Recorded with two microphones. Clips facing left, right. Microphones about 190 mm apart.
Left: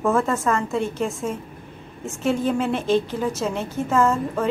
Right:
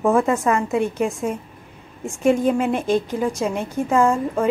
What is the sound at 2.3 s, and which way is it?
A woman's voice, 10° right (ahead or behind).